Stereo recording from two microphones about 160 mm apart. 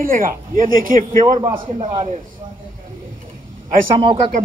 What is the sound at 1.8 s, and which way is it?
Speech, 40° right (ahead or behind).